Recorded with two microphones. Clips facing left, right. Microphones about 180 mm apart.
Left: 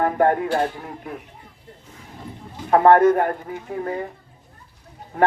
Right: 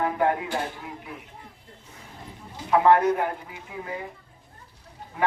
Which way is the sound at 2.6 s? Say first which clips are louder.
Left 5 dB; 50° left (ahead or behind).